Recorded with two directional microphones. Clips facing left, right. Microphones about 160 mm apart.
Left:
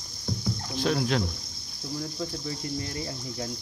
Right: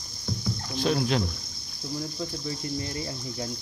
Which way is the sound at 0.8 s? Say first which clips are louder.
Right 1 dB; 20° right (ahead or behind).